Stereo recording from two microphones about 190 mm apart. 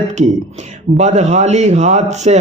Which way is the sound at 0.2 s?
35° right (ahead or behind).